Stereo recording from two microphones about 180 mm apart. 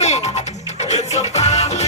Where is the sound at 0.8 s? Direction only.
40° left (ahead or behind).